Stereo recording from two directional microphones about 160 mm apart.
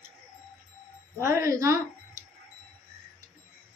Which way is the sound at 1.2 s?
20° right (ahead or behind).